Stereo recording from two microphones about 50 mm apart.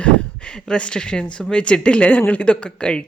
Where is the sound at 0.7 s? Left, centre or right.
Centre.